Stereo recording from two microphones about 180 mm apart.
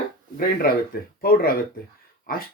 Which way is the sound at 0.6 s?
55° left (ahead or behind).